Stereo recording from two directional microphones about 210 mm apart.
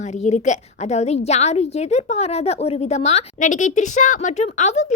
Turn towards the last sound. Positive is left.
turn(degrees=30)  # may be behind; listen again after turning